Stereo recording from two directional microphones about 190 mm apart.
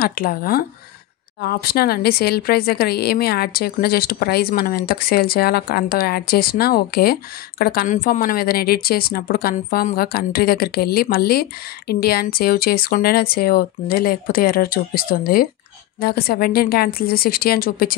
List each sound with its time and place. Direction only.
0.0 s speech: 50° left (ahead or behind)